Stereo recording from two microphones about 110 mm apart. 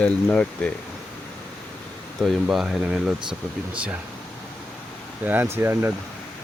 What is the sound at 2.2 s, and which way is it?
Speech, 5° right (ahead or behind).